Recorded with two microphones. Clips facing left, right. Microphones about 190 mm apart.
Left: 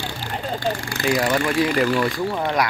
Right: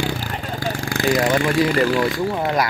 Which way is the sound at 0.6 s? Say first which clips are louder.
Right 4 dB; 90° right.